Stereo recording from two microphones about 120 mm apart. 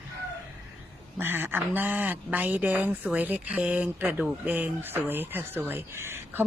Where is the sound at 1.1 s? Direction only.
15° right (ahead or behind).